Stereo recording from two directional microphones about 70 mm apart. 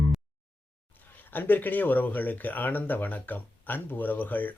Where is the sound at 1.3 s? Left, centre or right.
Left.